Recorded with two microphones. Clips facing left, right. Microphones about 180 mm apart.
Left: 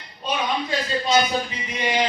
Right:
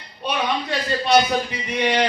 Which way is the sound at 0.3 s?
65° right (ahead or behind).